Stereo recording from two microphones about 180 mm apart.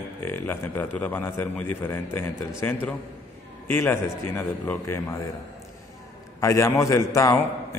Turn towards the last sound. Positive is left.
turn(degrees=15)  # may be behind; listen again after turning